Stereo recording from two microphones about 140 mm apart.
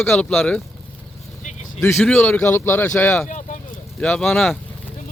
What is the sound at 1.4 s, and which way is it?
Vehicle, 55° left (ahead or behind).